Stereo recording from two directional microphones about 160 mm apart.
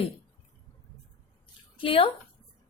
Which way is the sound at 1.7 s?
35° left (ahead or behind).